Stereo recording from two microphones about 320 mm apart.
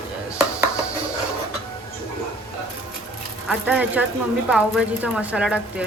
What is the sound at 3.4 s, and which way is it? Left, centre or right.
A woman's voice, centre.